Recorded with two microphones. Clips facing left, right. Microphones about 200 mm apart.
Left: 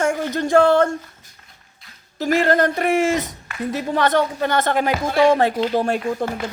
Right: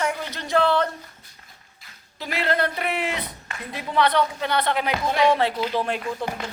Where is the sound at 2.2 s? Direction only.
45° left (ahead or behind).